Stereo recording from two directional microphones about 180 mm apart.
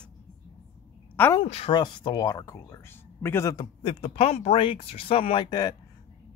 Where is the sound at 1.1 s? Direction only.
10° left (ahead or behind).